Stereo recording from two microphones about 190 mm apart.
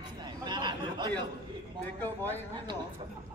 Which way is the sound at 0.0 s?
25° right (ahead or behind).